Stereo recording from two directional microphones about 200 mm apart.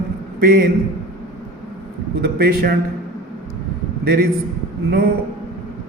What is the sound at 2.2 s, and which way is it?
Speech, 50° right (ahead or behind).